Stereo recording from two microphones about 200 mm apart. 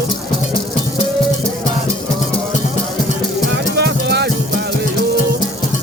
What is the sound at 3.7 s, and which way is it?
Music, 55° right (ahead or behind).